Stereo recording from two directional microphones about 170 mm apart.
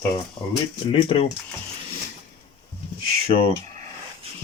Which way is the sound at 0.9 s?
30° left (ahead or behind).